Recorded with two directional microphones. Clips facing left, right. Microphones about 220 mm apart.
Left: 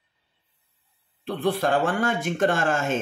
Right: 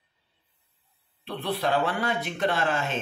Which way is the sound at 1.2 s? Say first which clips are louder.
Left 5 dB; 45° left (ahead or behind).